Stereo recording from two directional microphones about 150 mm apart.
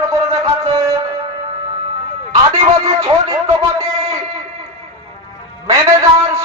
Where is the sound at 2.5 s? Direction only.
20° right (ahead or behind).